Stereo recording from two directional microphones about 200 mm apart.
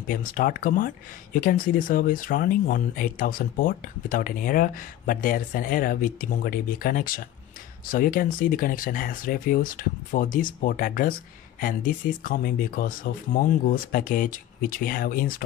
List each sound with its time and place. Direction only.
0.1 s speech: 45° left (ahead or behind)